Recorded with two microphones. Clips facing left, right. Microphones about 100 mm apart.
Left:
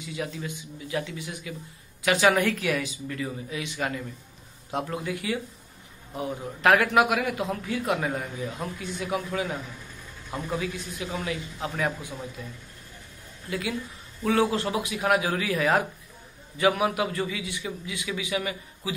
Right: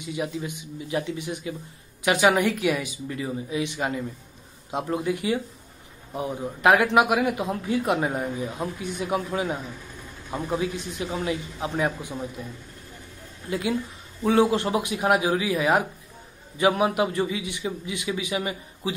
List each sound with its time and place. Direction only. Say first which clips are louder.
0.0 s a man's voice: right 4 dB; 20° right (ahead or behind)